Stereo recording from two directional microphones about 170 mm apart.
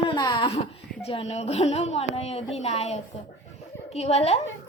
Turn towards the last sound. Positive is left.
turn(degrees=40)  # may be behind; listen again after turning